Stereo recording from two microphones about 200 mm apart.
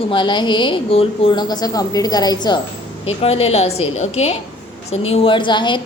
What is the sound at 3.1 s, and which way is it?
A woman's voice, 30° left (ahead or behind).